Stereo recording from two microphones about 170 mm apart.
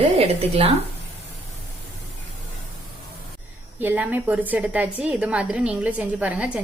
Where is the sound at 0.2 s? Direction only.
35° right (ahead or behind).